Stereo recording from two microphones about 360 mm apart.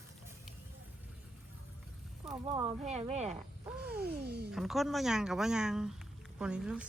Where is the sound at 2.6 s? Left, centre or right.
Centre.